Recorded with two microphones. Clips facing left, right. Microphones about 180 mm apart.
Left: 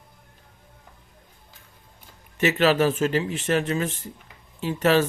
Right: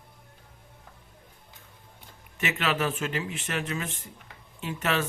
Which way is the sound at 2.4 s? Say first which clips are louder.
Left 9 dB; 35° left (ahead or behind).